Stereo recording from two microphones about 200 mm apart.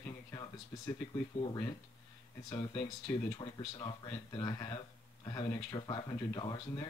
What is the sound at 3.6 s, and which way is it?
Speech, 25° left (ahead or behind).